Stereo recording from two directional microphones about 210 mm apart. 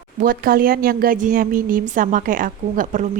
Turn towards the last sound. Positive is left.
turn(degrees=-40)  # may be behind; listen again after turning